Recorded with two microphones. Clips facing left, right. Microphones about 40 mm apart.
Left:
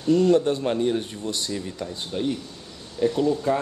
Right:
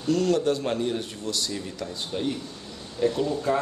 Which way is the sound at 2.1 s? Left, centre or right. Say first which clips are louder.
Left 3 dB; centre.